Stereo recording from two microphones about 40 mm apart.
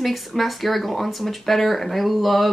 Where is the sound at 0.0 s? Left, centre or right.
Centre.